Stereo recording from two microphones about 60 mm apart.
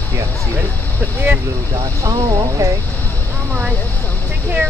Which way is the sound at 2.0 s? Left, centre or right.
Right.